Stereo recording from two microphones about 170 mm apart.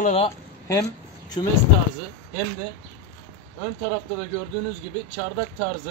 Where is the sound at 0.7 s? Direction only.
20° left (ahead or behind).